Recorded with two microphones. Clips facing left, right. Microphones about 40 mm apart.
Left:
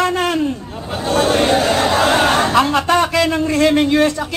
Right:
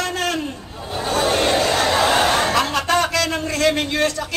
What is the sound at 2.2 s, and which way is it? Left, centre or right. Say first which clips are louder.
A man's voice: left 4 dB; left.